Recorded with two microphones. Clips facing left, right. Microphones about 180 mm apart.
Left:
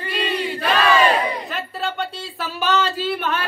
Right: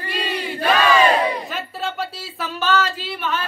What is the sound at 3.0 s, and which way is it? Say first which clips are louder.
Singing: left 3 dB; 55° left (ahead or behind).